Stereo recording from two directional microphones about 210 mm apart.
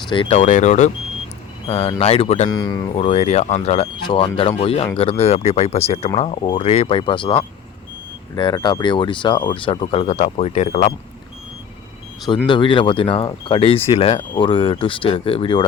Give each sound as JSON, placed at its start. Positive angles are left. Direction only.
{"t": 0.1, "sound": "speech", "side_deg": 25}
{"t": 12.5, "sound": "speech", "side_deg": 25}